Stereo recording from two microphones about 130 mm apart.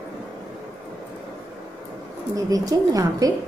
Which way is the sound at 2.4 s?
25° right (ahead or behind).